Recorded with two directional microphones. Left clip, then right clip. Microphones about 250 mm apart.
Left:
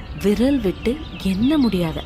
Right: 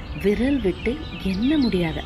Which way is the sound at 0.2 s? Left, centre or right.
Left.